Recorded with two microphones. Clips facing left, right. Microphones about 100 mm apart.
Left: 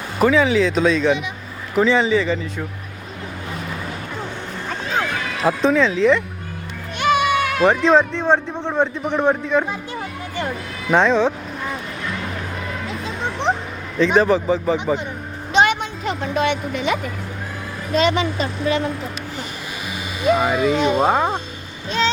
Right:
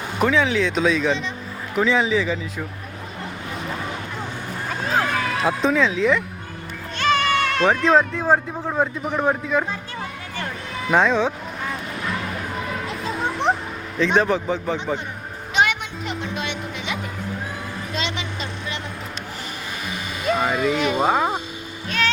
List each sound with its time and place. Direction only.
0.2 s speech: centre (ahead or behind)
5.4 s speech: centre (ahead or behind)
7.0 s speech: 10° left (ahead or behind)
10.9 s speech: centre (ahead or behind)
12.9 s a sound: centre (ahead or behind)
14.0 s speech: centre (ahead or behind)
15.5 s music: 30° left (ahead or behind); by 17.0 s 50° left (ahead or behind)
17.9 s a woman's voice: 45° left (ahead or behind)
20.2 s speech: 5° left (ahead or behind)
21.8 s boat: 20° left (ahead or behind)